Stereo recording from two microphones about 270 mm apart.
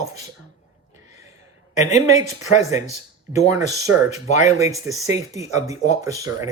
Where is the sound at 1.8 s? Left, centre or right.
Left.